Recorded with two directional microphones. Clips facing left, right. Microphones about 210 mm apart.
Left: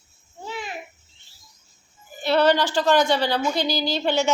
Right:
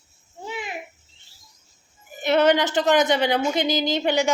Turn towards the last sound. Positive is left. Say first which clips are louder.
# right 1 dB
turn(degrees=-15)  # may be behind; listen again after turning